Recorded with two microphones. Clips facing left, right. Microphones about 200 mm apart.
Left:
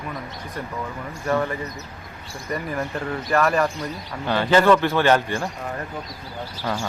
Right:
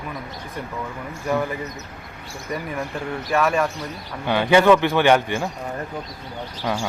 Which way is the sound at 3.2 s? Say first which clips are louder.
Even; centre (ahead or behind).